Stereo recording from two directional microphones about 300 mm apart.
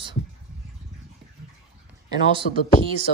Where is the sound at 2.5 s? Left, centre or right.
Left.